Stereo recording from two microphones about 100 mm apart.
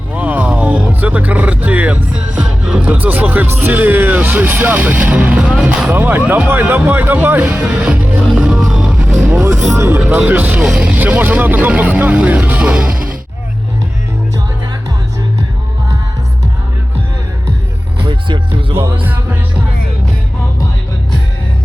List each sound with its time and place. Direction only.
0.1 s speech: 15° right (ahead or behind)
5.9 s speech: 20° right (ahead or behind)
8.4 s music: 5° right (ahead or behind)
9.7 s speech: 25° right (ahead or behind); by 13.0 s 10° right (ahead or behind)
18.0 s music: 55° right (ahead or behind)
19.0 s music: 15° right (ahead or behind)